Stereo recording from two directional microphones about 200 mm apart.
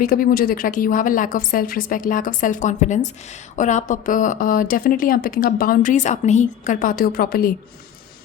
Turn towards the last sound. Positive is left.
turn(degrees=50)  # may be behind; listen again after turning